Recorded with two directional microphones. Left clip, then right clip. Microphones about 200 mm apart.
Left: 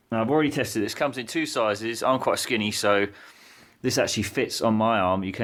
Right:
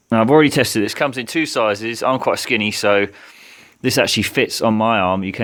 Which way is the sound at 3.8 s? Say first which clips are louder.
Right 8 dB; 40° right (ahead or behind).